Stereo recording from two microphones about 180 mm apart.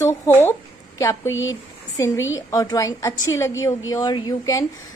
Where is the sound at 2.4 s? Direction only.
20° left (ahead or behind).